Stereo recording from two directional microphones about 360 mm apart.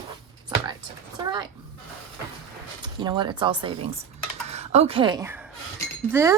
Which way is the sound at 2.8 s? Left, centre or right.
Centre.